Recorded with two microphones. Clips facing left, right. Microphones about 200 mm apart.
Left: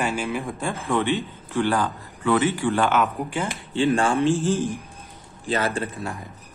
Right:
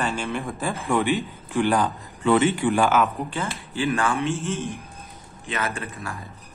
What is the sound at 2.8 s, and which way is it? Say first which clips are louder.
Speech: right 1 dB; centre (ahead or behind).